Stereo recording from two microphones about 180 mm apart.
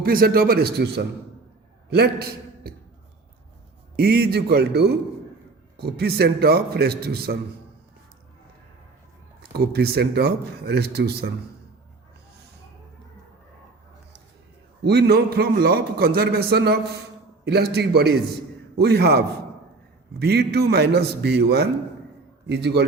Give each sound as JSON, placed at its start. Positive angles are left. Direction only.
{"t": 0.0, "sound": "a man's voice", "side_deg": -55}
{"t": 3.9, "sound": "a man's voice", "side_deg": -60}
{"t": 9.4, "sound": "a man's voice", "side_deg": -60}
{"t": 14.8, "sound": "a man's voice", "side_deg": -65}